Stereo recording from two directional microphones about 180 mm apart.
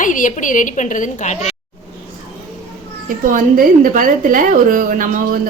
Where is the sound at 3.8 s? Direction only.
50° right (ahead or behind).